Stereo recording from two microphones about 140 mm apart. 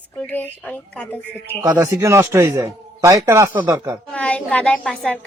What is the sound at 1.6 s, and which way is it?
A man's voice, 25° right (ahead or behind).